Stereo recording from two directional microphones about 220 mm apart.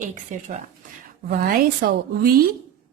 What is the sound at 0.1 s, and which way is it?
A woman's voice, 35° right (ahead or behind).